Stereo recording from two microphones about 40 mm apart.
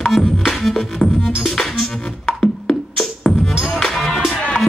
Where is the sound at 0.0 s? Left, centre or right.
Centre.